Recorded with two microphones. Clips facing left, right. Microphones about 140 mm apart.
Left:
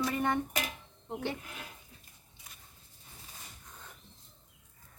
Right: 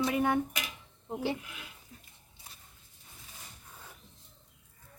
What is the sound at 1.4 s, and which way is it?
Speech, 40° left (ahead or behind).